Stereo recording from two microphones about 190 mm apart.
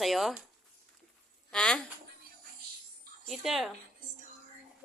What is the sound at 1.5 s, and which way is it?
Speech, 5° left (ahead or behind).